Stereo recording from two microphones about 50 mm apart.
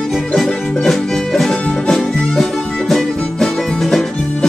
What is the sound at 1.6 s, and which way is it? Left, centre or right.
Music, centre.